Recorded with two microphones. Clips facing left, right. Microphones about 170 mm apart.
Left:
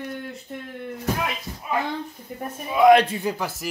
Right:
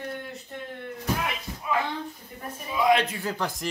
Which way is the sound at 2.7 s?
60° left (ahead or behind).